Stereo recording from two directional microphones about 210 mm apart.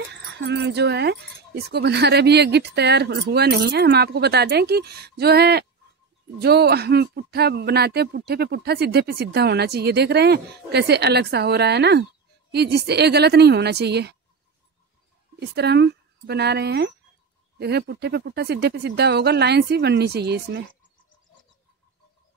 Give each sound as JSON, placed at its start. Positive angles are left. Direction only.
{"t": 0.5, "sound": "speech", "side_deg": -55}
{"t": 15.3, "sound": "speech", "side_deg": -55}